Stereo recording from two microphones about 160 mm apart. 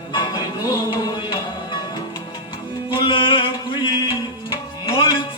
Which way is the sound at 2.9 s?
35° left (ahead or behind).